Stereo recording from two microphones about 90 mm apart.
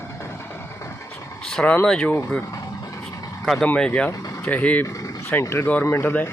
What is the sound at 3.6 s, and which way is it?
Speech, 15° left (ahead or behind).